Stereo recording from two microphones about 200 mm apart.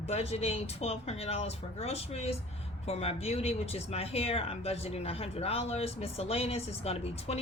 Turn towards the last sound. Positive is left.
turn(degrees=30)  # may be behind; listen again after turning